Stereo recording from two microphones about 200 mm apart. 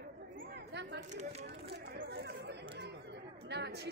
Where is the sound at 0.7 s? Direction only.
55° right (ahead or behind).